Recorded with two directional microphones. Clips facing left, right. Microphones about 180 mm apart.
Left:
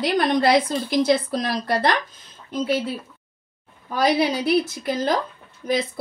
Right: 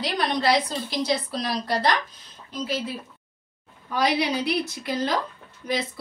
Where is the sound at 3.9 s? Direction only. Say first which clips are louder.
Left 4 dB; 50° left (ahead or behind).